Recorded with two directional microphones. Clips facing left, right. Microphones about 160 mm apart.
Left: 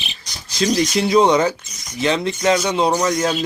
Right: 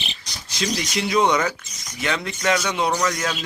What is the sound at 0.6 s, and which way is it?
Speech, 35° left (ahead or behind).